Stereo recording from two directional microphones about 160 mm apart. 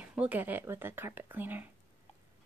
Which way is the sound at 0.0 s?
10° right (ahead or behind).